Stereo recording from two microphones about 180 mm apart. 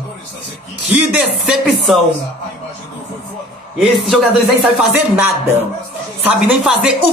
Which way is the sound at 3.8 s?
Centre (ahead or behind).